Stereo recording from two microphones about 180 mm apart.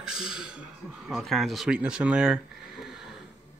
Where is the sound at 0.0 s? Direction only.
5° right (ahead or behind).